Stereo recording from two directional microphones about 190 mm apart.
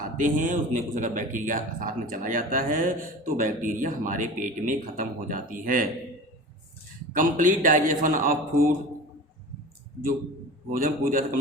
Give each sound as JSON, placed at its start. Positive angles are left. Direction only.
{"t": 0.2, "sound": "speech", "side_deg": -40}
{"t": 7.1, "sound": "speech", "side_deg": -45}
{"t": 10.7, "sound": "speech", "side_deg": -45}